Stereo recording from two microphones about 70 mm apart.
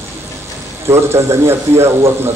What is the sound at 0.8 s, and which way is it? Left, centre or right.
A man's voice, right.